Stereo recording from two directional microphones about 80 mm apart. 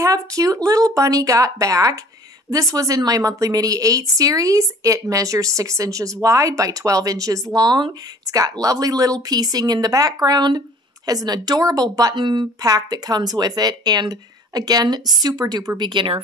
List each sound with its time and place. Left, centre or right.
0.0 s speech: right
12.2 s speech: right
12.6 s speech: right
15.8 s speech: right